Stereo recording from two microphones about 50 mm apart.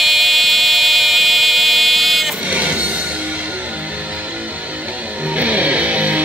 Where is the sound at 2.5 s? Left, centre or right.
Right.